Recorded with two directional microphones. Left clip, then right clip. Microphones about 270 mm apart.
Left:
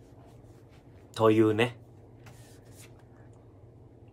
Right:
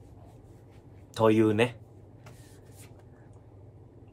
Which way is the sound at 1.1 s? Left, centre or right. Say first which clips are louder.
Even; centre.